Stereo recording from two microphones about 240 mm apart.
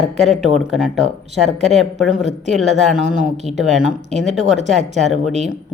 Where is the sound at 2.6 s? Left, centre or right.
Centre.